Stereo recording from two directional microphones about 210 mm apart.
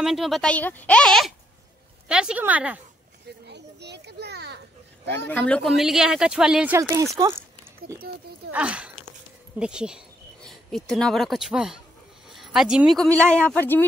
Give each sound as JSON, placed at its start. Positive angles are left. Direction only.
{"t": 0.0, "sound": "a woman's voice", "side_deg": 0}
{"t": 3.4, "sound": "children playing", "side_deg": -55}
{"t": 5.0, "sound": "speech", "side_deg": 10}
{"t": 6.8, "sound": "a woman's voice", "side_deg": -15}
{"t": 8.5, "sound": "speech", "side_deg": -5}